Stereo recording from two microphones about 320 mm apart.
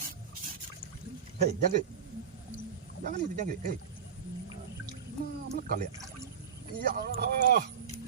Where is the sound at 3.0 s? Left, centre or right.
Right.